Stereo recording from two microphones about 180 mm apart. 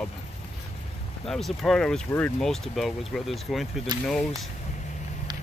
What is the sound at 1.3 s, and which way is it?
Speech, centre (ahead or behind).